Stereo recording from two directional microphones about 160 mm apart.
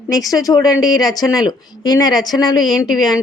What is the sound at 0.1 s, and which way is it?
Speech, 20° left (ahead or behind).